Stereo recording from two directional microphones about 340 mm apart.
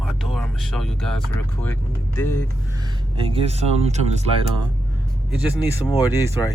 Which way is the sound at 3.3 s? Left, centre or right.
Centre.